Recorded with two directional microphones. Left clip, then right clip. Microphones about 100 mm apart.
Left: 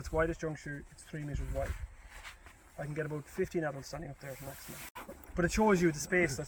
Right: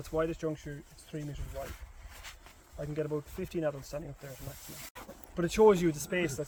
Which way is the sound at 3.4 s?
45° right (ahead or behind).